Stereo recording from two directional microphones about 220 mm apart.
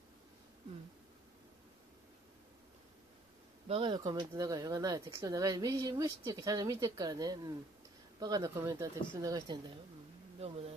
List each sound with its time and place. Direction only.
3.6 s speech: 25° right (ahead or behind)